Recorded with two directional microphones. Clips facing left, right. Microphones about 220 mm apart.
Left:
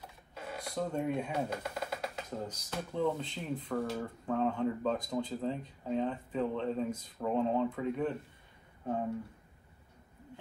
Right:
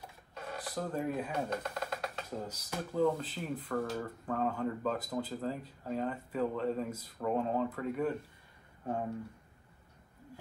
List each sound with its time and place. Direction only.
0.3 s a sound: centre (ahead or behind)
2.2 s speech: 10° right (ahead or behind)
3.6 s speech: 5° left (ahead or behind)
4.3 s speech: 5° right (ahead or behind)